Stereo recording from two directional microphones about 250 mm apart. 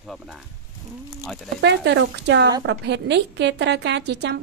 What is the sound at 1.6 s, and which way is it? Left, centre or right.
A woman's voice, right.